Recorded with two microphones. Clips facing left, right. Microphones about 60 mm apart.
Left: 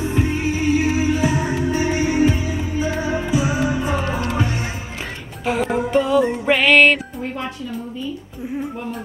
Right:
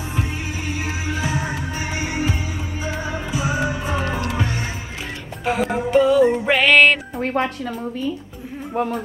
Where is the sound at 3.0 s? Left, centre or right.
Left.